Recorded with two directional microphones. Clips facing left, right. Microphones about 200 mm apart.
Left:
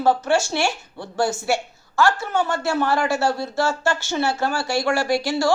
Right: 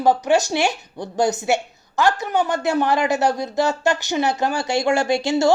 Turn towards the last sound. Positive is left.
turn(degrees=-25)  # may be behind; listen again after turning